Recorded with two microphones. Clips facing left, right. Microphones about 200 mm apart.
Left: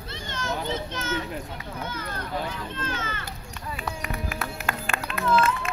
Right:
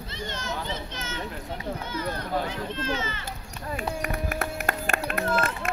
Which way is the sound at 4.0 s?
45° right (ahead or behind).